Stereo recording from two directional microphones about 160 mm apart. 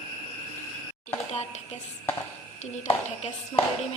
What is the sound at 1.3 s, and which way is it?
A woman's voice, 45° left (ahead or behind).